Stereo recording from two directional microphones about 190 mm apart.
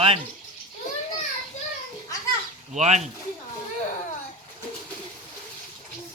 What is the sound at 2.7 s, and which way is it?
Speech, 35° right (ahead or behind).